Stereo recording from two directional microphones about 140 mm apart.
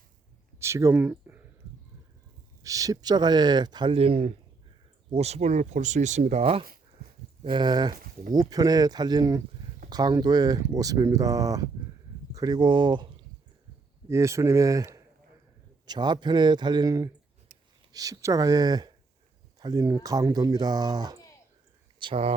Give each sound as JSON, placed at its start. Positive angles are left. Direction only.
{"t": 0.6, "sound": "speech", "side_deg": -20}
{"t": 1.1, "sound": "a sound", "side_deg": -15}
{"t": 2.6, "sound": "speech", "side_deg": -25}
{"t": 7.4, "sound": "speech", "side_deg": -35}
{"t": 14.1, "sound": "speech", "side_deg": -20}
{"t": 21.9, "sound": "speech", "side_deg": -40}